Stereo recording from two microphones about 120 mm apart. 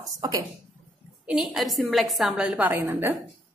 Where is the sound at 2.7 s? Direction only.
20° right (ahead or behind).